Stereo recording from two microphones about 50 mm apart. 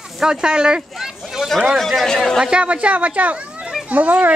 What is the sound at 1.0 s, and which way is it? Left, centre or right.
Speech, centre.